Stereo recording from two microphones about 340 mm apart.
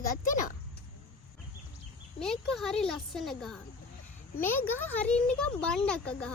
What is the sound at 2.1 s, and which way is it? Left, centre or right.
Speech, centre.